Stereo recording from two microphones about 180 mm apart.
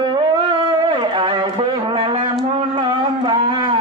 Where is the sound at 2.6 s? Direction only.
30° right (ahead or behind).